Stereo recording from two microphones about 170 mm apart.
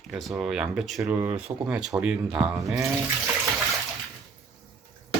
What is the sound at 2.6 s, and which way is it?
Speech, 20° right (ahead or behind).